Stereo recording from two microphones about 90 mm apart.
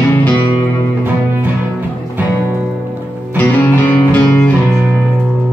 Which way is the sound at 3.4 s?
20° left (ahead or behind).